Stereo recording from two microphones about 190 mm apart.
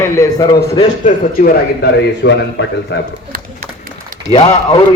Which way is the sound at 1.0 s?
50° left (ahead or behind).